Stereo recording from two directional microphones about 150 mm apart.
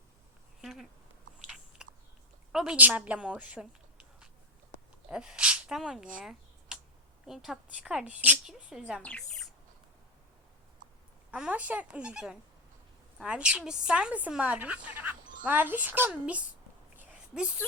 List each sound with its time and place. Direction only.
0.6 s speech: centre (ahead or behind)
1.5 s biting: centre (ahead or behind)
2.5 s a woman's voice: 5° right (ahead or behind)
5.0 s speech: 5° right (ahead or behind)
6.7 s a sound: 5° right (ahead or behind)
7.3 s a woman's voice: centre (ahead or behind)
9.0 s speech: 10° left (ahead or behind)
10.8 s a sound: 60° right (ahead or behind)
11.3 s a woman's voice: 10° right (ahead or behind)